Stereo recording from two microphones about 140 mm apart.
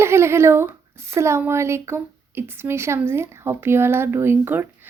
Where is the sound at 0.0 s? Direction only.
20° right (ahead or behind).